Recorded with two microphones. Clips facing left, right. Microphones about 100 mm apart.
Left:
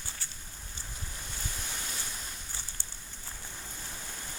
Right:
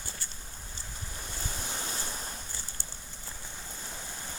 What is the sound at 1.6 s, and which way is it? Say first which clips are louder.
Waves: right 3 dB; 30° right (ahead or behind).